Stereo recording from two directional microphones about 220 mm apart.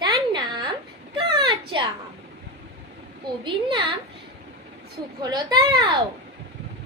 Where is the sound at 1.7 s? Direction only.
20° right (ahead or behind).